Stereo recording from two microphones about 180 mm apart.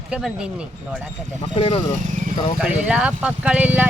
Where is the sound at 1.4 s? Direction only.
30° left (ahead or behind).